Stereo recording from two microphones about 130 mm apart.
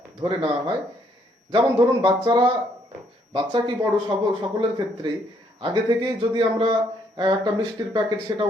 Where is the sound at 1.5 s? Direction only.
40° right (ahead or behind).